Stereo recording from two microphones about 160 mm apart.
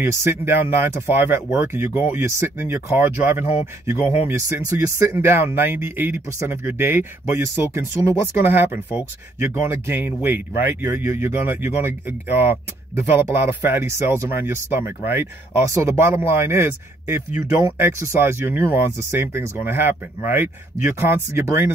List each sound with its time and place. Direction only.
0.0 s speech: 15° right (ahead or behind)